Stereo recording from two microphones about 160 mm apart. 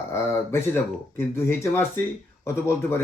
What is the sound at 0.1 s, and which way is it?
Speech, 15° left (ahead or behind).